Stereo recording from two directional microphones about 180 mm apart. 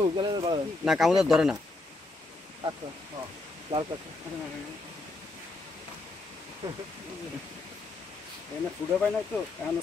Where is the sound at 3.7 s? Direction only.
30° right (ahead or behind).